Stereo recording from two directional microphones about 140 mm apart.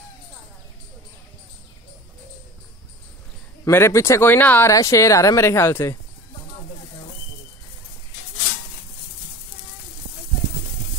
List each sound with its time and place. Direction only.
3.6 s speech: 20° left (ahead or behind)